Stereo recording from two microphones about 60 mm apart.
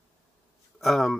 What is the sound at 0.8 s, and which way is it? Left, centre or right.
Speech, centre.